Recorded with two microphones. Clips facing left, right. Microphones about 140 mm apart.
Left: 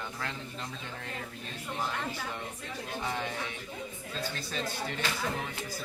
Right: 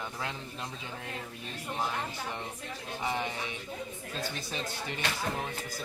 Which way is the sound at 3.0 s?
15° right (ahead or behind).